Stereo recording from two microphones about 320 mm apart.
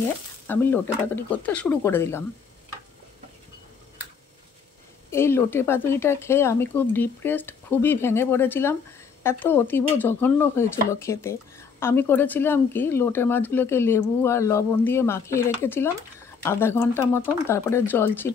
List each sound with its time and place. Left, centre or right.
0.5 s speech: centre
5.1 s speech: centre